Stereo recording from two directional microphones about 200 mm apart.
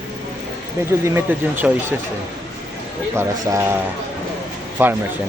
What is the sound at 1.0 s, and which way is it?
Speech, 10° right (ahead or behind).